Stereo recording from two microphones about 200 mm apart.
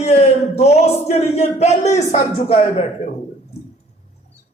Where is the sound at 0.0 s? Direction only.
35° left (ahead or behind).